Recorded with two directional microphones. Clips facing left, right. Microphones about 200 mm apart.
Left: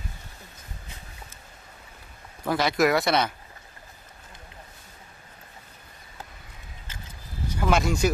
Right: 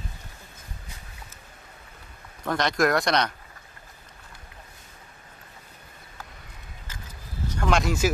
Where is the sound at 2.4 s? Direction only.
5° left (ahead or behind).